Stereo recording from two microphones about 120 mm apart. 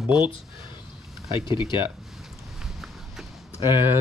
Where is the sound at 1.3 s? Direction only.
40° left (ahead or behind).